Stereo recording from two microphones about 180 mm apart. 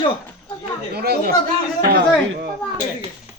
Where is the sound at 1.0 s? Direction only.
60° right (ahead or behind).